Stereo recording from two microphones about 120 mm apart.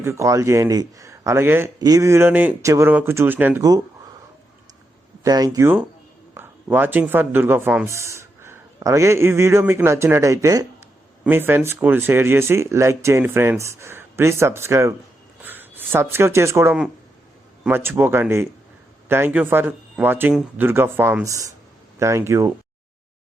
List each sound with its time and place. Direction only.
0.0 s speech: 25° right (ahead or behind)
2.6 s speech: 25° right (ahead or behind)
3.6 s speech: 30° right (ahead or behind)
5.2 s speech: 30° right (ahead or behind)
6.3 s a sound: 20° right (ahead or behind)
7.1 s speech: 15° right (ahead or behind)
11.2 s speech: 20° right (ahead or behind)